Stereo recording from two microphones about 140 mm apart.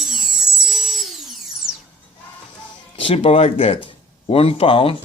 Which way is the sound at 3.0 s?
40° left (ahead or behind).